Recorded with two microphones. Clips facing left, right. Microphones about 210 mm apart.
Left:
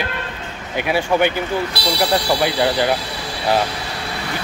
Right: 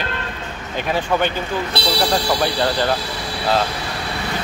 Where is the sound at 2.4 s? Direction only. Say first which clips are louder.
Left 2 dB; 10° left (ahead or behind).